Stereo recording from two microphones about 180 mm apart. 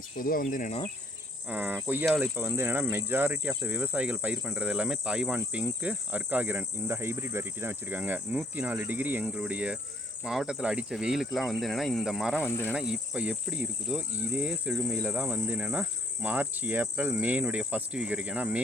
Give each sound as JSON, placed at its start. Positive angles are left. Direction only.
{"t": 0.2, "sound": "insect", "side_deg": 50}
{"t": 1.5, "sound": "cricket", "side_deg": -10}
{"t": 10.2, "sound": "speech", "side_deg": -5}
{"t": 12.4, "sound": "insect", "side_deg": 10}
{"t": 12.7, "sound": "cricket", "side_deg": -5}